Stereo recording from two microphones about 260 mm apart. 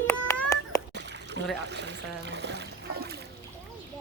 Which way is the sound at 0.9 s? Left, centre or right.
Right.